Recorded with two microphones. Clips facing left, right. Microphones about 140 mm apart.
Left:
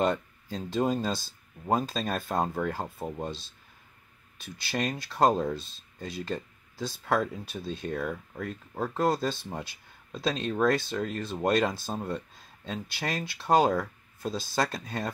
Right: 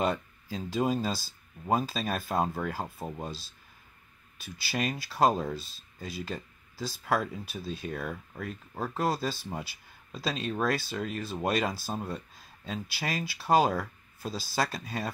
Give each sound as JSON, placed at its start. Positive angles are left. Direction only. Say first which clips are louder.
{"t": 0.0, "sound": "speech", "louder": "left 2 dB", "side_deg": -5}